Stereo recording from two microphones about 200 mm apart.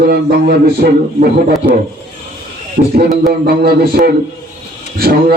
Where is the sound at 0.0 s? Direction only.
50° right (ahead or behind).